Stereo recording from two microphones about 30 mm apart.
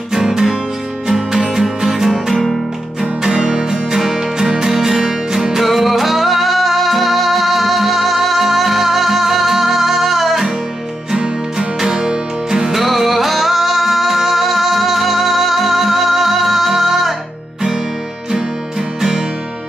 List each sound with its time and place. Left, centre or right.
0.1 s music: centre
1.8 s music: centre
2.3 s music: centre
3.5 s music: centre
5.6 s music: centre
11.5 s music: centre
18.9 s music: centre